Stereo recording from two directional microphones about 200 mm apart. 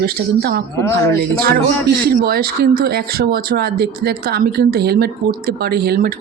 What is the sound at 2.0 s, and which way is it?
Speech, 50° right (ahead or behind).